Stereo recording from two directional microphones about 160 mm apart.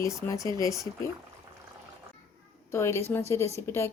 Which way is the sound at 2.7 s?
15° left (ahead or behind).